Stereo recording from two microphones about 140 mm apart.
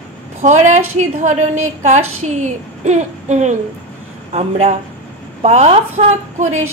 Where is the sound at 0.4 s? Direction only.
55° right (ahead or behind).